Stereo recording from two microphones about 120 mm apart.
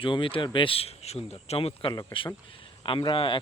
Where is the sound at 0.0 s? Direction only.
45° left (ahead or behind).